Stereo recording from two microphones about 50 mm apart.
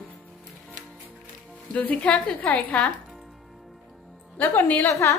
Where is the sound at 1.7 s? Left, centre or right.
Left.